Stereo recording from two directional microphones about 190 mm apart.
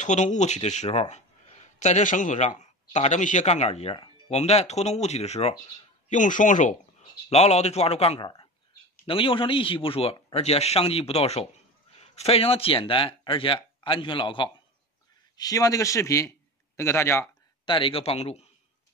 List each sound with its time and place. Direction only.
0.0 s a man's voice: 40° left (ahead or behind); by 16.3 s 15° left (ahead or behind)
16.7 s a sound: 15° left (ahead or behind)
17.7 s speech: 30° left (ahead or behind)